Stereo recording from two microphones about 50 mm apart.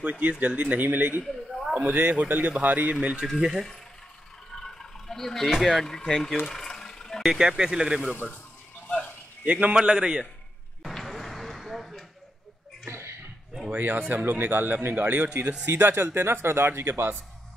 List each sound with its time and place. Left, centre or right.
0.0 s a man's voice: right
1.2 s a sound: centre
1.8 s a man's voice: right
3.3 s speech: centre
4.5 s a sound: centre
5.5 s speech: centre
6.4 s a sound: centre
7.2 s speech: centre
9.4 s speech: right
9.8 s speech: centre
10.8 s a sound: centre
13.7 s a man's voice: right